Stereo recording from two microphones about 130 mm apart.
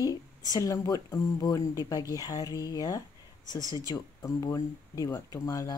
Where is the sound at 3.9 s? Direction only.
25° left (ahead or behind).